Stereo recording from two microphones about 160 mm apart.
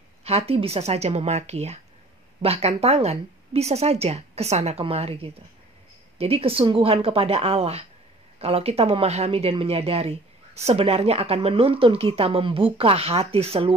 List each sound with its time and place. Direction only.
0.2 s speech: 40° right (ahead or behind)